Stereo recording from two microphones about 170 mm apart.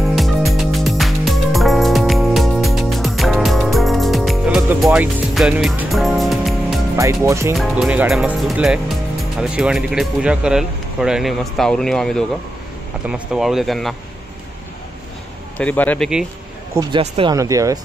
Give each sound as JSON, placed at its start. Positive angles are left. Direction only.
{"t": 0.0, "sound": "music", "side_deg": 0}
{"t": 4.8, "sound": "speech", "side_deg": 0}
{"t": 7.0, "sound": "speech", "side_deg": -20}
{"t": 7.5, "sound": "speech", "side_deg": 0}
{"t": 15.5, "sound": "speech", "side_deg": 10}
{"t": 16.9, "sound": "speech", "side_deg": -30}
{"t": 17.4, "sound": "speech", "side_deg": -20}